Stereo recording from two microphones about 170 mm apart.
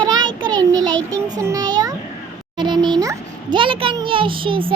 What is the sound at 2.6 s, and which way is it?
Music, 25° right (ahead or behind).